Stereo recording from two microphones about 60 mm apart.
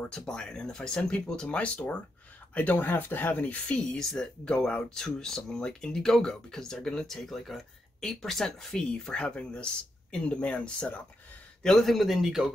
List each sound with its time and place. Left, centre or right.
0.2 s speech: centre
3.9 s speech: centre
11.6 s speech: centre